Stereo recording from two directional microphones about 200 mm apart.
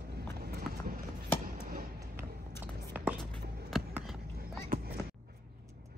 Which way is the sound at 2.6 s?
10° right (ahead or behind).